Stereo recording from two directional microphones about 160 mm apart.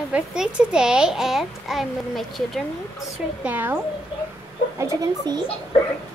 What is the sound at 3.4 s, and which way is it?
Speech, 10° right (ahead or behind).